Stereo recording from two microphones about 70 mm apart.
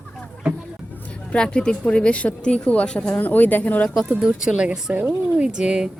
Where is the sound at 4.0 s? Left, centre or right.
Centre.